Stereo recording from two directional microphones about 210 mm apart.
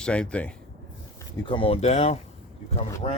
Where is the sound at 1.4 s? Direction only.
25° left (ahead or behind).